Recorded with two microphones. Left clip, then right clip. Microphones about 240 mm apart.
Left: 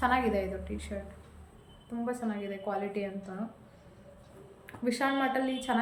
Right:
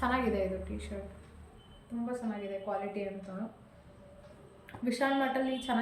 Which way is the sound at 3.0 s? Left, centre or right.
Centre.